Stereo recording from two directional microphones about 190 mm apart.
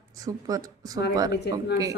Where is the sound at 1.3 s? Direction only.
60° left (ahead or behind).